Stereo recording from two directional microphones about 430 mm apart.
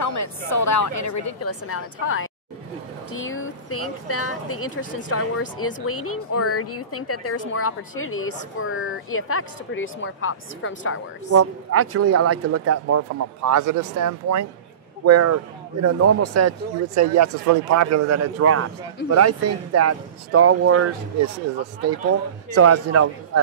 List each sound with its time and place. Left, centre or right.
0.0 s a woman's voice: left
11.2 s speech: right
22.5 s speech: right